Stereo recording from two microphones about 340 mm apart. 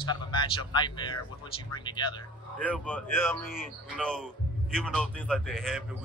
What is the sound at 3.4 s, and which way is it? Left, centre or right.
Speech, left.